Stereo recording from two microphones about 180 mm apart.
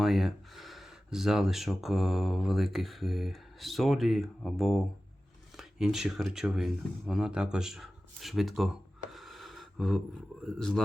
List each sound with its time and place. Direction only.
0.0 s speech: centre (ahead or behind)
9.1 s a sound: centre (ahead or behind)
10.4 s speech: centre (ahead or behind)